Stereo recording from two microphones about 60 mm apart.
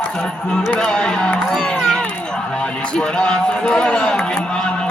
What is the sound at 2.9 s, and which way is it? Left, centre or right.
Speech, centre.